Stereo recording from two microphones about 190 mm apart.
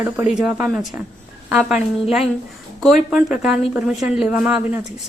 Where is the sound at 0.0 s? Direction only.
5° right (ahead or behind).